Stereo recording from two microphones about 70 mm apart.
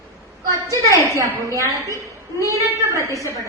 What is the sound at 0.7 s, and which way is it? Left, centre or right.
A woman's voice, right.